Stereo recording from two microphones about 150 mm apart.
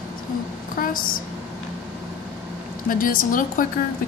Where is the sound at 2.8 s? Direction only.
65° left (ahead or behind).